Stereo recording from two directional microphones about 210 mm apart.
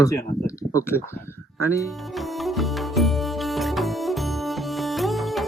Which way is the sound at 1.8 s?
Centre (ahead or behind).